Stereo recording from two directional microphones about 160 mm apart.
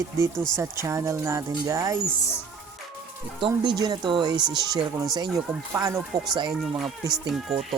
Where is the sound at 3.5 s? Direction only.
25° right (ahead or behind).